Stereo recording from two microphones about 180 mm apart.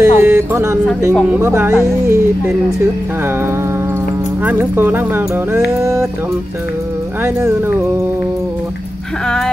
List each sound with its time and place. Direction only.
0.0 s speech: 15° right (ahead or behind)
4.5 s speech: 10° right (ahead or behind)